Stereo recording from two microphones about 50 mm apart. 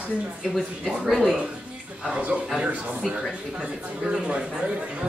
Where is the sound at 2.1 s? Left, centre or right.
Right.